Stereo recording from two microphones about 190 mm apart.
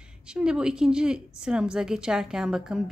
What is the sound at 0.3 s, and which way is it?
A woman's voice, 5° right (ahead or behind).